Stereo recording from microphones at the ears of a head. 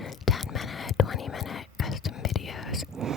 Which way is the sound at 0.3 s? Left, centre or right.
Left.